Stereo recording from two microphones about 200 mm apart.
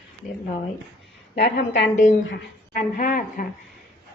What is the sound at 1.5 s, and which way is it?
Speech, 60° left (ahead or behind).